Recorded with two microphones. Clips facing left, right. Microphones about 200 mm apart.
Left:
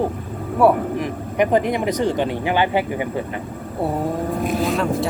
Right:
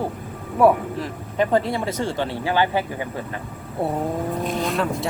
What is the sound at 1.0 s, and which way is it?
Speech, 15° left (ahead or behind).